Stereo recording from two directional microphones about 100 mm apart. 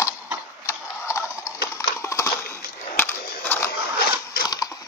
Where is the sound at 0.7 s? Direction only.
30° left (ahead or behind).